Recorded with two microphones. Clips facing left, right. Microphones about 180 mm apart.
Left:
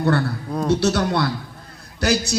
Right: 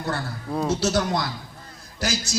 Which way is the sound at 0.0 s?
65° left (ahead or behind).